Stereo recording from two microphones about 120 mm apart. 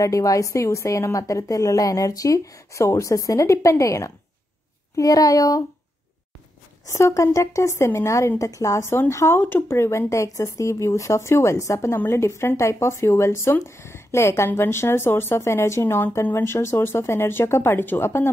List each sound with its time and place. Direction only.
0.0 s a woman's voice: 30° left (ahead or behind)
6.9 s a woman's voice: 25° left (ahead or behind)